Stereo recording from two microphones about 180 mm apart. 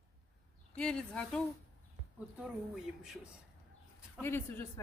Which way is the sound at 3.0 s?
5° right (ahead or behind).